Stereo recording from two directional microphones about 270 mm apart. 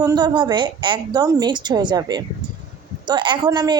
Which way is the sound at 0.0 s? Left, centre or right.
Centre.